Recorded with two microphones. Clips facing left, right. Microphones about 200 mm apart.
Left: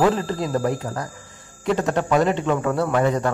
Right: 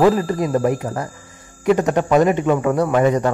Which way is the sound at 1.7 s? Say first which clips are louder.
Right 5 dB; 20° right (ahead or behind).